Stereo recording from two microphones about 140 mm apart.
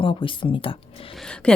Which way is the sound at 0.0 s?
40° left (ahead or behind).